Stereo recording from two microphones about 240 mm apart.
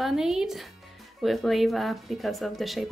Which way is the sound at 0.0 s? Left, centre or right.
Centre.